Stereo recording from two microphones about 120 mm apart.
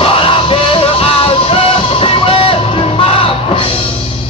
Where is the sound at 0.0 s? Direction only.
50° left (ahead or behind).